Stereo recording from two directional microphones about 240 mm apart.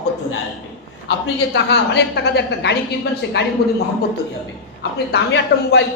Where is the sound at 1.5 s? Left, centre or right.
Left.